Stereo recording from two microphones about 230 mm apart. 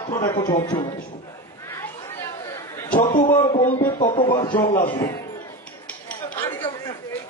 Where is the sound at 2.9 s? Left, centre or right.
Left.